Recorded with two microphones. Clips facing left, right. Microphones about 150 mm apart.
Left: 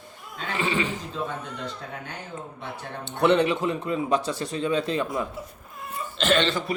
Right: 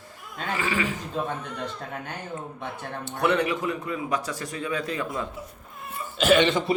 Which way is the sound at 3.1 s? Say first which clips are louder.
Left 3 dB; 25° left (ahead or behind).